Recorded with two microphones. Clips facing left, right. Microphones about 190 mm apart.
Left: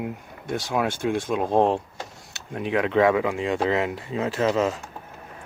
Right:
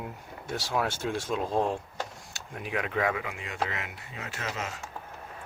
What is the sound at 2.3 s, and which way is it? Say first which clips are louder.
Speech: left 9 dB; 25° left (ahead or behind).